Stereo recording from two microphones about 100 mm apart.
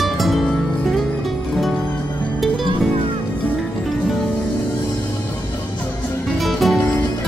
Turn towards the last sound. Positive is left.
turn(degrees=0)  # may be behind; listen again after turning